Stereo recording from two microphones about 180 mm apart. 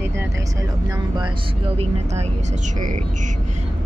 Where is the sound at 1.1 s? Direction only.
30° right (ahead or behind).